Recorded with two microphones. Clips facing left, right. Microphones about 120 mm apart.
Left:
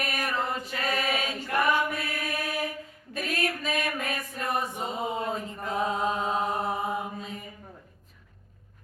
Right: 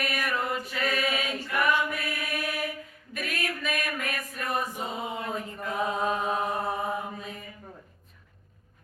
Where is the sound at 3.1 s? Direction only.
30° left (ahead or behind).